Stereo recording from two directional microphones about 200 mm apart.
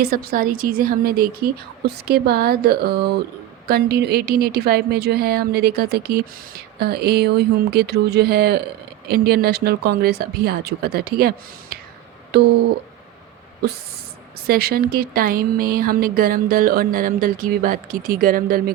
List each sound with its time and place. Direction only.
0.0 s a woman's voice: 50° right (ahead or behind)
14.4 s a woman's voice: 50° right (ahead or behind)